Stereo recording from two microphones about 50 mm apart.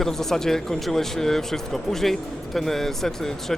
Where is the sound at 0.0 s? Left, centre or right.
Centre.